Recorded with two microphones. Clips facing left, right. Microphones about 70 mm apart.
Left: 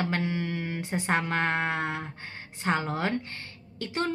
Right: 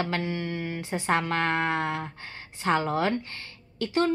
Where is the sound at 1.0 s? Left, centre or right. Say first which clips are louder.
Right 2 dB; centre.